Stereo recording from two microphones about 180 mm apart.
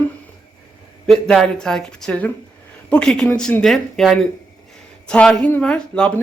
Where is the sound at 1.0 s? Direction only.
5° left (ahead or behind).